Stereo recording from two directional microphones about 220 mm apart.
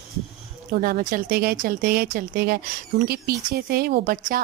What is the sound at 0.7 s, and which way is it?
Speech, 40° right (ahead or behind).